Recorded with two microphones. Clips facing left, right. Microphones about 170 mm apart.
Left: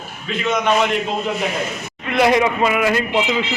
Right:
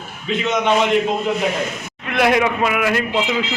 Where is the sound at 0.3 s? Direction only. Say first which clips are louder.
Right 1 dB; 20° right (ahead or behind).